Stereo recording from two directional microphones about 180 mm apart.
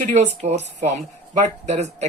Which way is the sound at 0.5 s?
35° right (ahead or behind).